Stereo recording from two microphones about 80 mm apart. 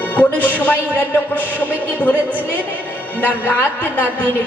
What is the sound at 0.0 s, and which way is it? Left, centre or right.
Speech, left.